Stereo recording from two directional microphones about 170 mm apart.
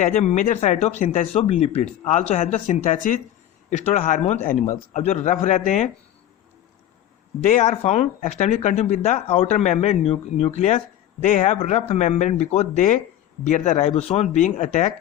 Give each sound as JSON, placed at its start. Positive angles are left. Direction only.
{"t": 0.0, "sound": "speech", "side_deg": 40}
{"t": 7.4, "sound": "speech", "side_deg": 45}